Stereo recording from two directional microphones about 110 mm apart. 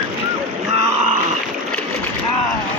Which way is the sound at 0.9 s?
90° right.